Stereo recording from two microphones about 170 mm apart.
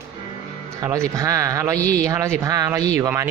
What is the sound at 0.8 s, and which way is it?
Speech, 20° right (ahead or behind).